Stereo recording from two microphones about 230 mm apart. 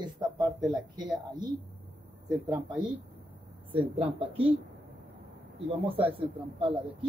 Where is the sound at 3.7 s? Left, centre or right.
Right.